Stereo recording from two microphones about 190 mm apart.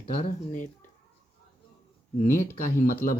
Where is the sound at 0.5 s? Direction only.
45° left (ahead or behind).